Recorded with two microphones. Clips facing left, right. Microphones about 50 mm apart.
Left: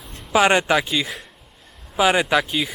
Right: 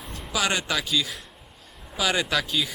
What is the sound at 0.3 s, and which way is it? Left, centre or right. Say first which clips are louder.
Speech: left 9 dB; left.